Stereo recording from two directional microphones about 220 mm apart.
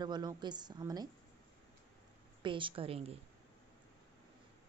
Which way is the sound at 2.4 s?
20° right (ahead or behind).